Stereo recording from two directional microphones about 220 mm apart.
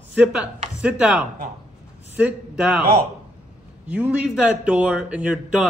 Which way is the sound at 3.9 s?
5° right (ahead or behind).